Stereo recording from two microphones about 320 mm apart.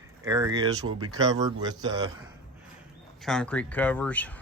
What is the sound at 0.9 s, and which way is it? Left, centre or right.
Speech, right.